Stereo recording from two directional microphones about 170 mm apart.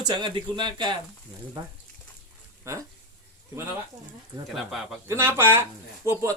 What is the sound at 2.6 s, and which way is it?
Speech, 15° right (ahead or behind).